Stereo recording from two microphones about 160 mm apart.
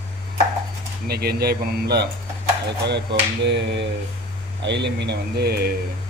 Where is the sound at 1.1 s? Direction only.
75° right (ahead or behind).